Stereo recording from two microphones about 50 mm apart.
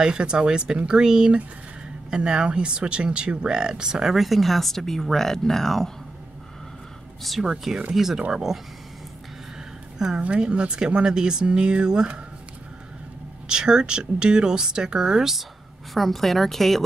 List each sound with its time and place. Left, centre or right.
0.0 s speech: centre
7.4 s speech: centre
9.9 s a woman's voice: centre
10.2 s speech: right
13.5 s speech: centre
15.9 s a woman's voice: centre